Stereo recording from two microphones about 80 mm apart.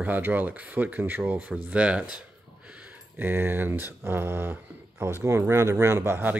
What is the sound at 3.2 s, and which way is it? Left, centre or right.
Speech, right.